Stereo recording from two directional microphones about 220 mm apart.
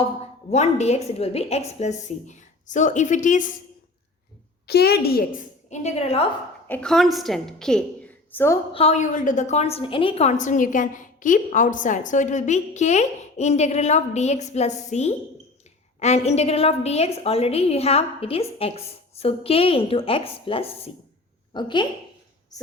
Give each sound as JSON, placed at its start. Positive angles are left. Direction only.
{"t": 0.5, "sound": "a woman's voice", "side_deg": 30}
{"t": 4.6, "sound": "a woman's voice", "side_deg": 45}
{"t": 6.7, "sound": "a woman's voice", "side_deg": 5}
{"t": 8.7, "sound": "a woman's voice", "side_deg": 30}